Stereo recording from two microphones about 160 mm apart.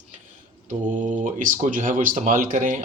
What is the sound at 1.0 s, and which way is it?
Speech, 55° right (ahead or behind).